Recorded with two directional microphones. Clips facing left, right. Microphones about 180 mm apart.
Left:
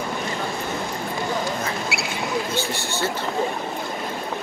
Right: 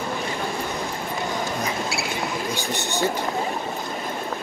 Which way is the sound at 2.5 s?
15° right (ahead or behind).